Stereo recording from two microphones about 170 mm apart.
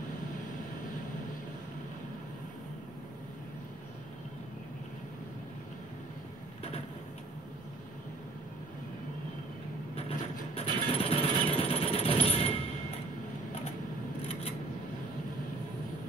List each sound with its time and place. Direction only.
9.9 s jackhammer: 35° left (ahead or behind)